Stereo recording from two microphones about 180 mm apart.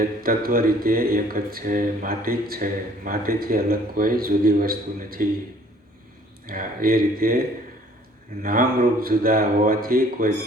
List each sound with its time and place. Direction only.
0.0 s speech: 55° right (ahead or behind)
6.5 s speech: 50° right (ahead or behind)